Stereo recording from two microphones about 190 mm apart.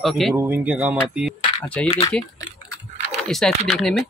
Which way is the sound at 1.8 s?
5° left (ahead or behind).